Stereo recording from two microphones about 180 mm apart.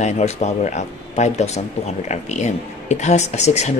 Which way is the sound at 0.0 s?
40° left (ahead or behind).